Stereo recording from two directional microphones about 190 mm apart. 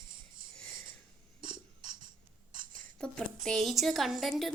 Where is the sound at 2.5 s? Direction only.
45° right (ahead or behind).